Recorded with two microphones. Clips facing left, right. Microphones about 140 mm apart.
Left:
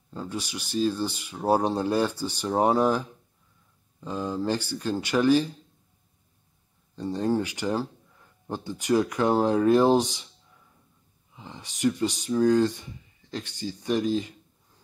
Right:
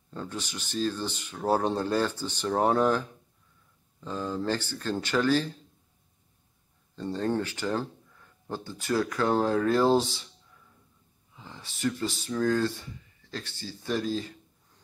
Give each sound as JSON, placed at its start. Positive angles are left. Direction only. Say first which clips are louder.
{"t": 0.1, "sound": "speech", "louder": "left 3 dB", "side_deg": 10}
{"t": 7.0, "sound": "speech", "louder": "left 3 dB", "side_deg": 10}
{"t": 11.3, "sound": "speech", "louder": "left 3 dB", "side_deg": 15}